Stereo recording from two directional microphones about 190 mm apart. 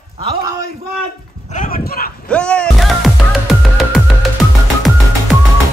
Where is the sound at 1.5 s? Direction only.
45° left (ahead or behind).